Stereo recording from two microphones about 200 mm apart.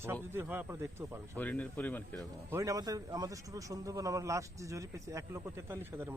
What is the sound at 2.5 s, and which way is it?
A man's voice, 15° right (ahead or behind).